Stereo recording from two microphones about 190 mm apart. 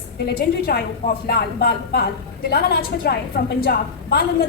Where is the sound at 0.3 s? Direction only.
55° left (ahead or behind).